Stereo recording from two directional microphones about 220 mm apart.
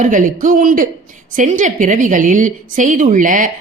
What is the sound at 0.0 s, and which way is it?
A woman's voice, 35° right (ahead or behind).